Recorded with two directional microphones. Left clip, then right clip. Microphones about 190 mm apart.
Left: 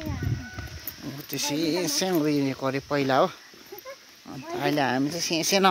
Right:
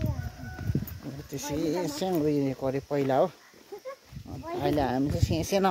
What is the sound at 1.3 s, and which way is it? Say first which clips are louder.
Speech: left 4 dB; centre (ahead or behind).